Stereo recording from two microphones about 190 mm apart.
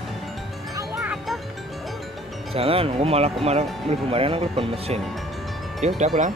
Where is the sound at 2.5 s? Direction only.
30° right (ahead or behind).